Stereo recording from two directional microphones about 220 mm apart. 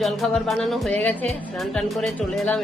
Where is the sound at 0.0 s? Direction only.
Centre (ahead or behind).